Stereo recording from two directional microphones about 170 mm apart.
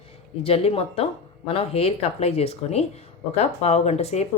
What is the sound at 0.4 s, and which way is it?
Speech, 35° left (ahead or behind).